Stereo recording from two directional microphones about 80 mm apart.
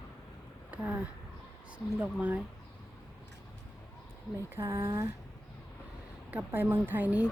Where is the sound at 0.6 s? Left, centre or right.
Centre.